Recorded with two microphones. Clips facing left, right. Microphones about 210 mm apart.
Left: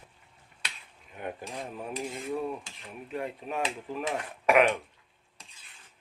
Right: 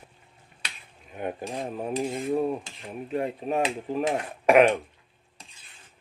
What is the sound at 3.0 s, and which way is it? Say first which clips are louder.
Speech: right 7 dB; 30° right (ahead or behind).